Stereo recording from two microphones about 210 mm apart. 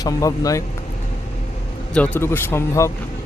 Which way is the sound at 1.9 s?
10° left (ahead or behind).